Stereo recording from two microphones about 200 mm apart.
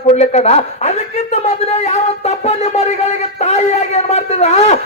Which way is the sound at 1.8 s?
35° left (ahead or behind).